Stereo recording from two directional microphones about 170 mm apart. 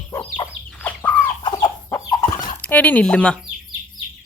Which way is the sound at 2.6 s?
10° left (ahead or behind).